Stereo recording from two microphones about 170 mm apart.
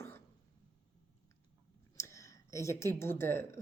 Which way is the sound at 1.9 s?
20° left (ahead or behind).